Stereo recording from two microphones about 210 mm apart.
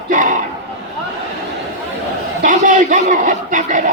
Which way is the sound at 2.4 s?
35° right (ahead or behind).